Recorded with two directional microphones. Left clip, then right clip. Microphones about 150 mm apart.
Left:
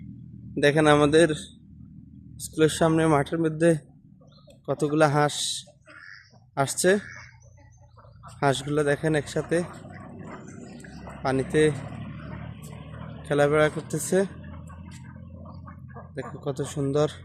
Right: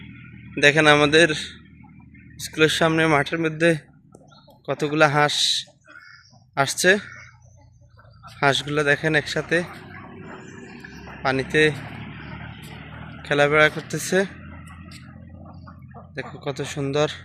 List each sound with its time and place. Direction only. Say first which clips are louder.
0.5 s speech: right 4 dB; 15° left (ahead or behind)
8.4 s speech: right 4 dB; 15° left (ahead or behind)
11.2 s speech: right 3 dB; 15° left (ahead or behind)
13.2 s speech: right 4 dB; 15° left (ahead or behind)
15.4 s a sound: even; 10° left (ahead or behind)